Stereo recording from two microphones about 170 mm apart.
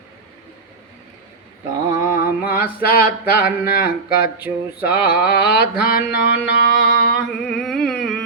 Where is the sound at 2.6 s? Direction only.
60° left (ahead or behind).